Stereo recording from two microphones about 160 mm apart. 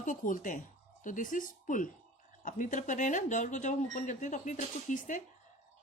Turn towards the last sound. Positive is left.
turn(degrees=55)  # may be behind; listen again after turning